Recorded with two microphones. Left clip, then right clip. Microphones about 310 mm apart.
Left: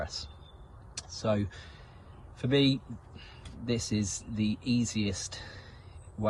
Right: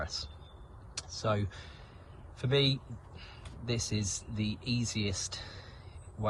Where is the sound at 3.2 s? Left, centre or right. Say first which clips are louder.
Left 2 dB; centre.